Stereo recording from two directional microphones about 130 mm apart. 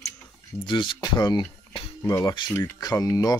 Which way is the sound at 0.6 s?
40° left (ahead or behind).